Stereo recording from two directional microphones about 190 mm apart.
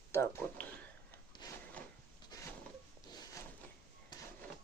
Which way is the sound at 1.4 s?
20° left (ahead or behind).